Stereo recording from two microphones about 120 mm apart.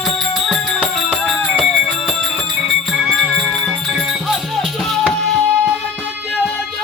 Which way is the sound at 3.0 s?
5° right (ahead or behind).